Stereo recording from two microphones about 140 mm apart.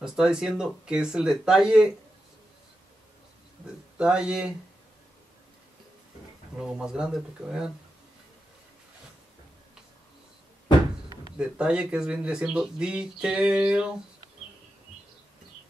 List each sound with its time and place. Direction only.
0.0 s speech: 5° right (ahead or behind)
4.0 s speech: 5° right (ahead or behind)
6.5 s speech: 5° right (ahead or behind)
11.3 s speech: 5° right (ahead or behind)